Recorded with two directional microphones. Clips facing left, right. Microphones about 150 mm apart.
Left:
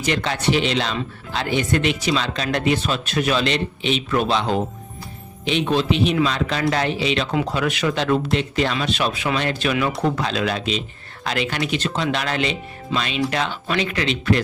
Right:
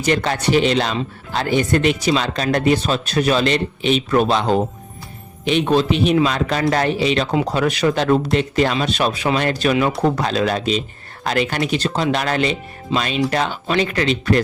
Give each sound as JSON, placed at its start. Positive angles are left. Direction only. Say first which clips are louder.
{"t": 0.0, "sound": "speech", "louder": "right 3 dB", "side_deg": -45}